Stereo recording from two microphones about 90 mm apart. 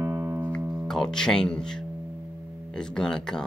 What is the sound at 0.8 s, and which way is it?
Speech, 5° left (ahead or behind).